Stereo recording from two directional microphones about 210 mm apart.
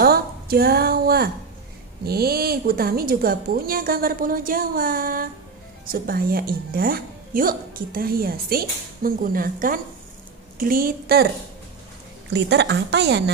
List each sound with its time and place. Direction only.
0.0 s a woman's voice: 45° right (ahead or behind)
12.3 s a woman's voice: 55° right (ahead or behind)